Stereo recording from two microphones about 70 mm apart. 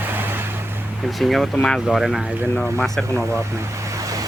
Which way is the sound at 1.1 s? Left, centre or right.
Centre.